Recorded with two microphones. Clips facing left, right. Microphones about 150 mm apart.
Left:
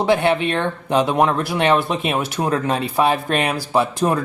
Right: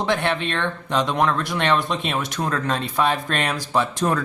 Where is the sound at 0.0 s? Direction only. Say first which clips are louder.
Left 6 dB; 10° left (ahead or behind).